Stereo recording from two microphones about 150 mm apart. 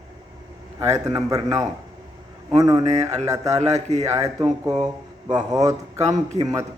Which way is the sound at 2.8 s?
45° right (ahead or behind).